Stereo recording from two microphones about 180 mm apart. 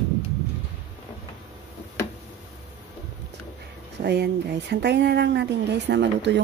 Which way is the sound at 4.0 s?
65° right (ahead or behind).